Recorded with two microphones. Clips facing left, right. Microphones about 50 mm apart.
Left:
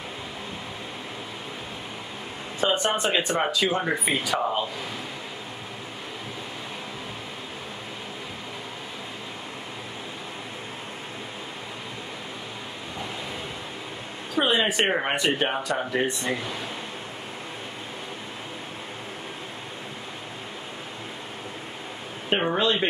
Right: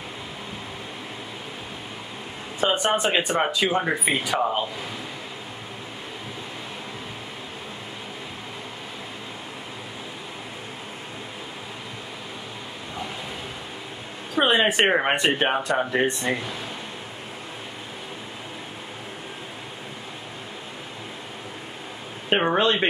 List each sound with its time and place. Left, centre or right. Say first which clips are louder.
2.6 s speech: right 2 dB; right
4.4 s speech: right 2 dB; centre
14.3 s a sound: right 3 dB; right
14.9 s speech: right 3 dB; right
22.3 s speech: right 3 dB; right
22.6 s speech: right 2 dB; right